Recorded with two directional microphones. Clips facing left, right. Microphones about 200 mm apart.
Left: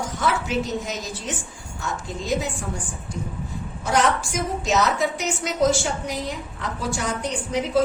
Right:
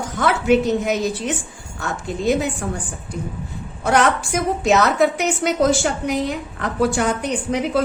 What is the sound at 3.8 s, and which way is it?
A woman's voice, 60° right (ahead or behind).